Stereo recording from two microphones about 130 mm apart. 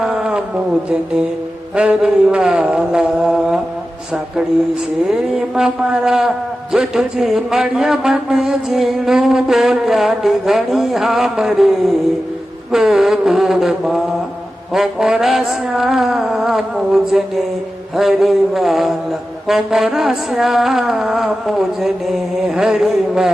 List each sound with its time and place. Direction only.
0.0 s a sound: 5° right (ahead or behind)
1.7 s a man's voice: 10° right (ahead or behind)
5.0 s a man's voice: 5° right (ahead or behind)
12.7 s a man's voice: 5° right (ahead or behind)